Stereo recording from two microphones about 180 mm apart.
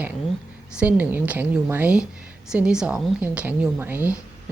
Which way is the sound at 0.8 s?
10° right (ahead or behind).